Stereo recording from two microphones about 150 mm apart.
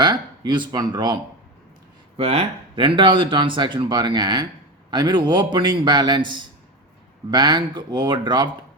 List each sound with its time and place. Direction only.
0.0 s speech: 30° right (ahead or behind)
2.1 s a man's voice: 45° right (ahead or behind)